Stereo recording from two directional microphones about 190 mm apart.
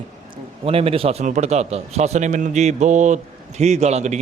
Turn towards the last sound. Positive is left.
turn(degrees=-35)  # may be behind; listen again after turning